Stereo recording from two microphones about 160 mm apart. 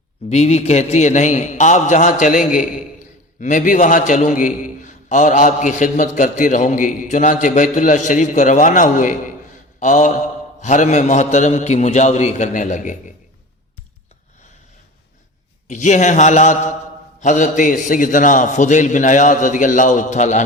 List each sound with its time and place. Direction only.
0.3 s a man's voice: 45° left (ahead or behind)
15.6 s a man's voice: 50° left (ahead or behind)